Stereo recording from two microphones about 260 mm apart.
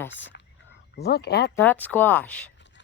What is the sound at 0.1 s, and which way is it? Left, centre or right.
Speech, left.